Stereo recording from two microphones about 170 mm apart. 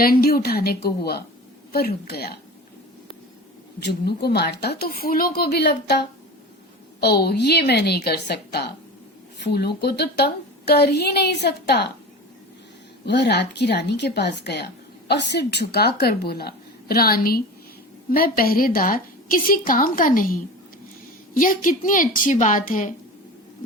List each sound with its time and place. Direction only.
0.0 s a woman's voice: 60° left (ahead or behind)
3.8 s speech: 75° left (ahead or behind)
13.1 s a woman's voice: 80° left; by 23.0 s 50° left (ahead or behind)